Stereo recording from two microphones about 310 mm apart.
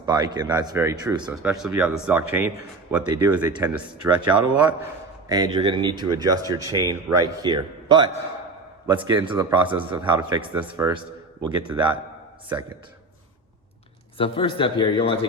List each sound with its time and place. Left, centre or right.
0.0 s speech: centre
5.3 s speech: centre
14.2 s a man's voice: centre